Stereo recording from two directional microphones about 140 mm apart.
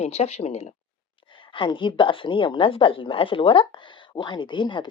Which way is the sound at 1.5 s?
35° left (ahead or behind).